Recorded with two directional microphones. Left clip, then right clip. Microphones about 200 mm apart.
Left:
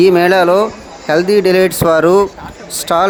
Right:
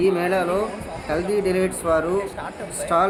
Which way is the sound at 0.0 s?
50° left (ahead or behind).